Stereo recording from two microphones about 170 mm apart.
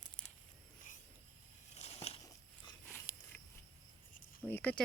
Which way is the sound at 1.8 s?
35° left (ahead or behind).